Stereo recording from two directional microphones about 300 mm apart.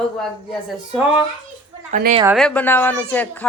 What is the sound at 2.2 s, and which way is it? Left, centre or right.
A woman's voice, centre.